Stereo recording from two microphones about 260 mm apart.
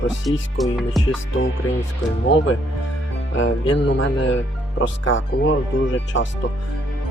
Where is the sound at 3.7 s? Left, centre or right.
Left.